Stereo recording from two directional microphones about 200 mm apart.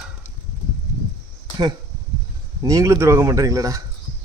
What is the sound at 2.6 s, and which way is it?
A man's voice, 15° right (ahead or behind).